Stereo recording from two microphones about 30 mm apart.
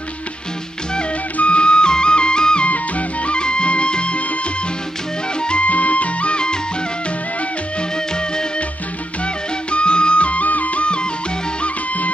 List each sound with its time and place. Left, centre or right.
1.5 s music: left
2.6 s music: left
3.3 s music: left
5.6 s music: left
6.3 s music: left
8.1 s music: left
9.2 s music: left